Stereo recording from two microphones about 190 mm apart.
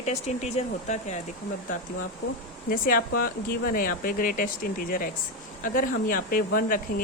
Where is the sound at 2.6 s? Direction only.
50° left (ahead or behind).